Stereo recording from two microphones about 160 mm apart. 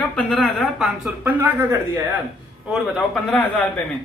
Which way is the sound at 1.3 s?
15° right (ahead or behind).